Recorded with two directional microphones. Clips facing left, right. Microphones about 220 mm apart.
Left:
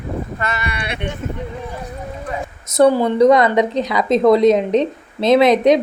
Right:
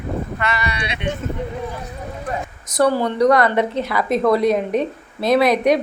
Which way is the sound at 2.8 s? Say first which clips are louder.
Left 4 dB; 15° left (ahead or behind).